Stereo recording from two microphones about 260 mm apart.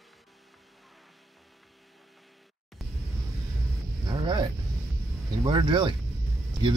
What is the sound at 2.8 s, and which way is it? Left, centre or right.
Music, centre.